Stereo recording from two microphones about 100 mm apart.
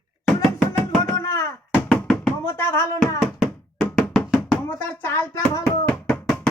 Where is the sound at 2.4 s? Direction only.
25° left (ahead or behind).